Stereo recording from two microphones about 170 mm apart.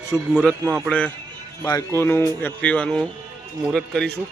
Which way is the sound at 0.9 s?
5° left (ahead or behind).